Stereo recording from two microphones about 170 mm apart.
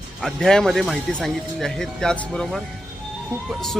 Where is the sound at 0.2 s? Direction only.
Centre (ahead or behind).